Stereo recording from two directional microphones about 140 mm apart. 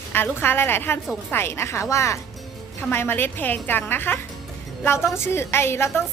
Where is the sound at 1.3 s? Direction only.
15° left (ahead or behind).